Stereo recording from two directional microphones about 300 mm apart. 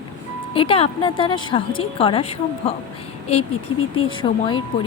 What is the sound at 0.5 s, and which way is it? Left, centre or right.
A woman's voice, centre.